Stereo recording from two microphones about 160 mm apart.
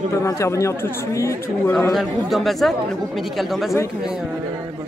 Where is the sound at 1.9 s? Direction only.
Centre (ahead or behind).